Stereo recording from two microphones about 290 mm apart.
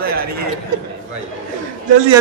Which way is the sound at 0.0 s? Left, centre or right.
Right.